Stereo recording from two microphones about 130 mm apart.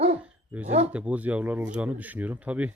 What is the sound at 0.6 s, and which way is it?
Speech, 55° right (ahead or behind).